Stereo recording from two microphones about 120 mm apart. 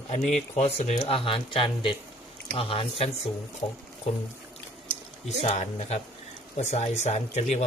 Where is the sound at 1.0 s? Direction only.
45° left (ahead or behind).